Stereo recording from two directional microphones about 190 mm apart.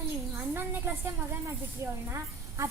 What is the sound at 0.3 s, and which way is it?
Speech, 10° right (ahead or behind).